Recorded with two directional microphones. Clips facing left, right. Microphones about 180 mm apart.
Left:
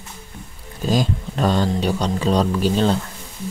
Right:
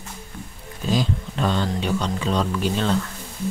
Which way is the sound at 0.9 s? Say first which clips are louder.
Left 2 dB; 45° left (ahead or behind).